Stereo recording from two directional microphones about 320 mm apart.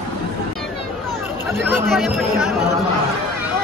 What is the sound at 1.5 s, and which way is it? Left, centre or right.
Speech, centre.